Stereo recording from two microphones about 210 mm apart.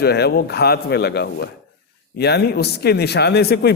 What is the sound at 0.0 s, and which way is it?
A man's voice, 50° left (ahead or behind).